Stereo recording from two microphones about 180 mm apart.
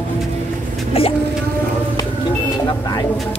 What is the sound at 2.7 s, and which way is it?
Vehicle, 25° left (ahead or behind).